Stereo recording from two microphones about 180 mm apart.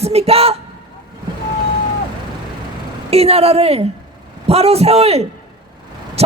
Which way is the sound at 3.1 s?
35° right (ahead or behind).